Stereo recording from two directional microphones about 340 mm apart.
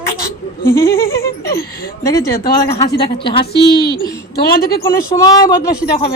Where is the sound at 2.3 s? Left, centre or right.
Left.